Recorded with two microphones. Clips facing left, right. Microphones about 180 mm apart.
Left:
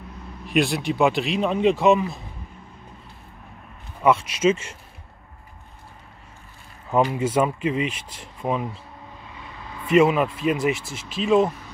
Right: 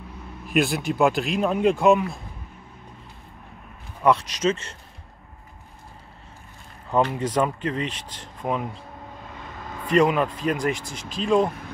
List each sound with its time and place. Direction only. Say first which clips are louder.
0.5 s speech: left 1 dB; centre (ahead or behind)
4.0 s speech: left 2 dB; 5° left (ahead or behind)
6.9 s speech: left 2 dB; 5° left (ahead or behind)
9.3 s vehicle: right 2 dB; 45° right (ahead or behind)
9.9 s speech: left 2 dB; 5° left (ahead or behind)